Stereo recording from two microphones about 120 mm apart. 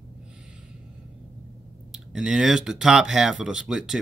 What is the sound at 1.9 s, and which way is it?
Speech, 5° right (ahead or behind).